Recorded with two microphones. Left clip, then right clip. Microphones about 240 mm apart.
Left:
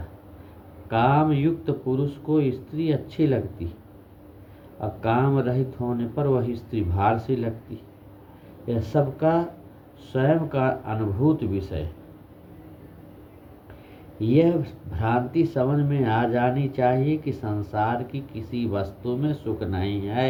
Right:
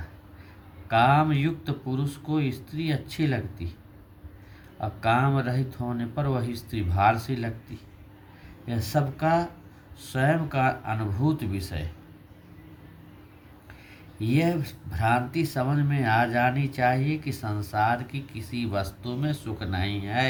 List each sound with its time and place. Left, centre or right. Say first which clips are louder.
0.9 s speech: even; right
4.8 s speech: even; right
8.6 s speech: left 4 dB; right
14.2 s speech: left 6 dB; right